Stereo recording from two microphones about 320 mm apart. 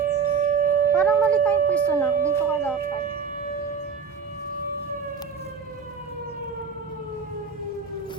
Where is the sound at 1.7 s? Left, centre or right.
Centre.